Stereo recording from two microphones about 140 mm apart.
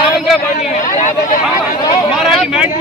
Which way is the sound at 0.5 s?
65° left (ahead or behind).